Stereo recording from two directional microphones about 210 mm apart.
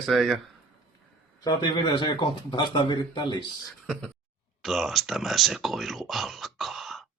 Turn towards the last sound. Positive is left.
turn(degrees=0)  # may be behind; listen again after turning